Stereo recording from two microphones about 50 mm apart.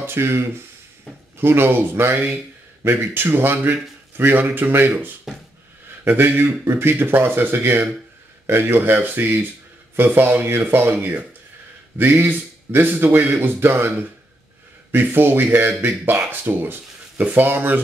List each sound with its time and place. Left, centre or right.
0.0 s speech: right
5.3 s a sound: centre
6.0 s a man's voice: right